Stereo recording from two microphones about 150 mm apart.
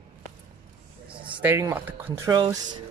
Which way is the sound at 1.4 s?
15° right (ahead or behind).